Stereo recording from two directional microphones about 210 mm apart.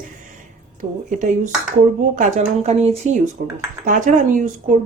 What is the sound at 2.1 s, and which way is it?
Speech, 35° right (ahead or behind).